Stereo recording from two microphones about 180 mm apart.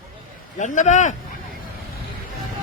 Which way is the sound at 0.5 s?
45° left (ahead or behind).